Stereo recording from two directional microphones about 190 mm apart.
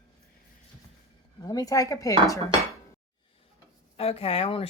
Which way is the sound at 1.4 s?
20° left (ahead or behind).